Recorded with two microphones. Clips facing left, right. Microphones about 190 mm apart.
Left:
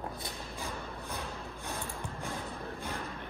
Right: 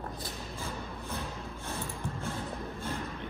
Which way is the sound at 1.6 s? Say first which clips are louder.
Right 2 dB; 15° left (ahead or behind).